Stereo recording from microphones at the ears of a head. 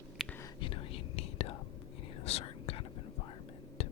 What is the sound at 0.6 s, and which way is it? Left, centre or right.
Whispering, left.